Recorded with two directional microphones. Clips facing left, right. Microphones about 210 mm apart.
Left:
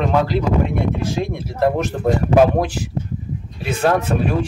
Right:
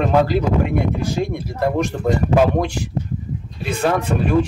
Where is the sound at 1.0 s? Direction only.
Centre (ahead or behind).